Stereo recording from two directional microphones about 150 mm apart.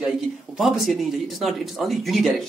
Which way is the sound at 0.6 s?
Centre (ahead or behind).